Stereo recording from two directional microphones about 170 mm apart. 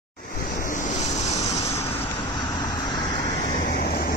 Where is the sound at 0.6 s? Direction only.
50° left (ahead or behind).